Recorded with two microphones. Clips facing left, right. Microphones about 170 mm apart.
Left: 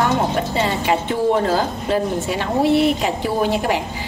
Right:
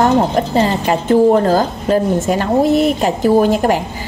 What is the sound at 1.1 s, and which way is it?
A woman's voice, 45° right (ahead or behind).